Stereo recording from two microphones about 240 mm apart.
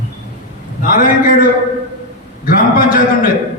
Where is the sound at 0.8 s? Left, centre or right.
Left.